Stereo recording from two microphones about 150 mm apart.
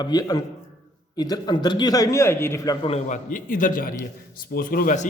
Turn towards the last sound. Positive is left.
turn(degrees=65)  # may be behind; listen again after turning